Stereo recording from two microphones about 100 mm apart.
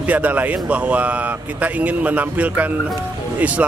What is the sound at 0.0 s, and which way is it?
A man's voice, 15° right (ahead or behind).